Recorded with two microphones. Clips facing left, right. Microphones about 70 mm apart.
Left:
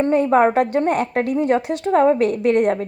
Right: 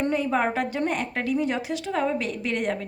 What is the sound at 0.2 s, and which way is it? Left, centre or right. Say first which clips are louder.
A woman's voice: left 9 dB; left.